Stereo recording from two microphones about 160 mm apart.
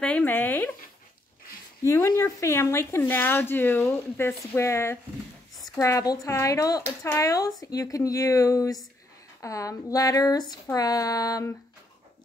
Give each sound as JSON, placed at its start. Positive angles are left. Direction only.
{"t": 0.0, "sound": "speech", "side_deg": 10}
{"t": 1.9, "sound": "speech", "side_deg": 15}